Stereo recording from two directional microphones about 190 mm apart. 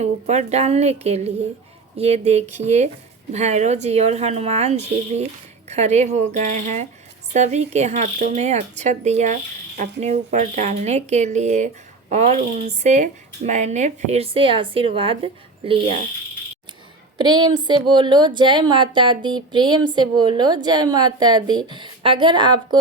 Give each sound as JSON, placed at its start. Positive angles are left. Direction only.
{"t": 0.0, "sound": "speech", "side_deg": -35}
{"t": 17.2, "sound": "a woman's voice", "side_deg": -25}